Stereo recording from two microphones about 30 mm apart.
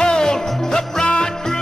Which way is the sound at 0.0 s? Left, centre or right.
Left.